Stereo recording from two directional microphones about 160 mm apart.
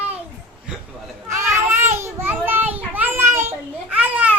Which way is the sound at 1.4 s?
20° right (ahead or behind).